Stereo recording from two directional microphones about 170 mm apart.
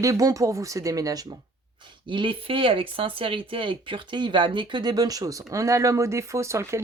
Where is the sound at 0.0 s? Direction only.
20° right (ahead or behind).